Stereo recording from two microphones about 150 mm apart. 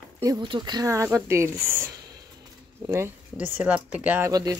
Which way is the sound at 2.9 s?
15° right (ahead or behind).